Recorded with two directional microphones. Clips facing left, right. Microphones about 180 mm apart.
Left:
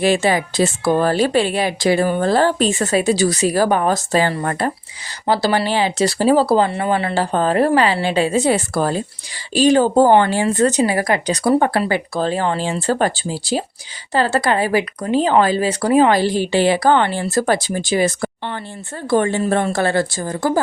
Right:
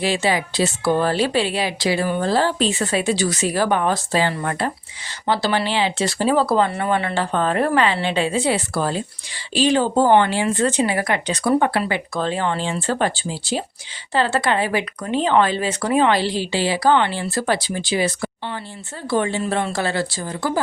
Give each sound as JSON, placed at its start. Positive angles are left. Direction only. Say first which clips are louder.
{"t": 0.0, "sound": "a woman's voice", "louder": "left 4 dB", "side_deg": 50}